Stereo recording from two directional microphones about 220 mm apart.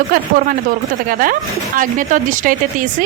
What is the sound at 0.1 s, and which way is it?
A woman's voice, 40° right (ahead or behind).